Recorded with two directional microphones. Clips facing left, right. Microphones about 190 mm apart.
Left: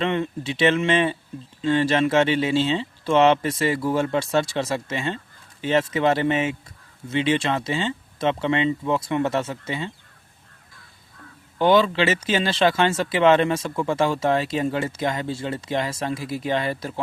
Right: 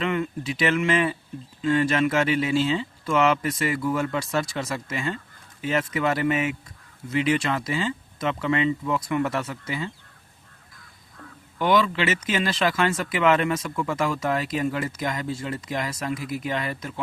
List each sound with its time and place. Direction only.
0.0 s speech: 30° left (ahead or behind)
11.5 s speech: 30° left (ahead or behind)